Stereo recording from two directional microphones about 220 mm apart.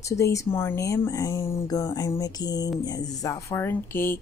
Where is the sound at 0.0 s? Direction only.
15° left (ahead or behind).